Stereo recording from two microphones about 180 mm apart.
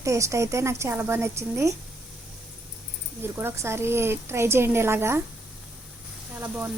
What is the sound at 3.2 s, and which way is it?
Speech, 15° right (ahead or behind).